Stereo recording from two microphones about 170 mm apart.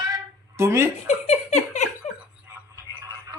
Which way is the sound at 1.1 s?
40° left (ahead or behind).